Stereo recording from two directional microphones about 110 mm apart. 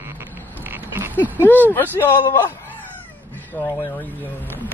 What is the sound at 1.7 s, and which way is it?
Speech, 20° left (ahead or behind).